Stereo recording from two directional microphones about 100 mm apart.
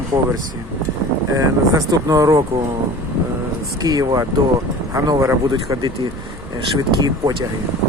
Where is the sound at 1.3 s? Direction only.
40° right (ahead or behind).